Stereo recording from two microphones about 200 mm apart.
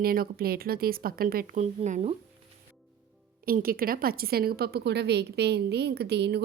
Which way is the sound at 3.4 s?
45° right (ahead or behind).